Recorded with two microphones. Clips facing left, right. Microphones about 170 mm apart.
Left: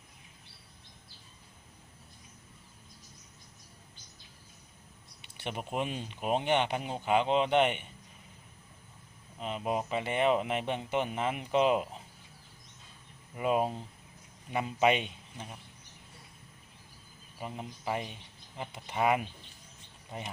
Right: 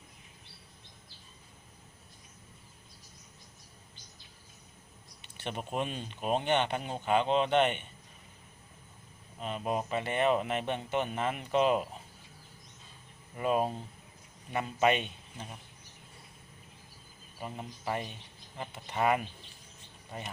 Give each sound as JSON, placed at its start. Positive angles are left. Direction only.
{"t": 5.4, "sound": "speech", "side_deg": 15}
{"t": 9.4, "sound": "speech", "side_deg": 15}
{"t": 13.3, "sound": "speech", "side_deg": 15}
{"t": 17.4, "sound": "speech", "side_deg": 15}